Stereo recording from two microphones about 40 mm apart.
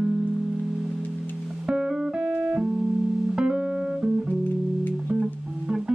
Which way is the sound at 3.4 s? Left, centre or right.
Centre.